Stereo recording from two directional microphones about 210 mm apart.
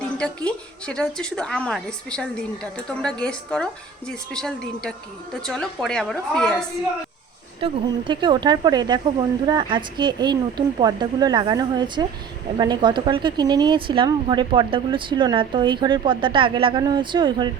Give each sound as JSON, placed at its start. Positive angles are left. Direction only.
{"t": 0.2, "sound": "a woman's voice", "side_deg": 5}
{"t": 7.6, "sound": "speech", "side_deg": -25}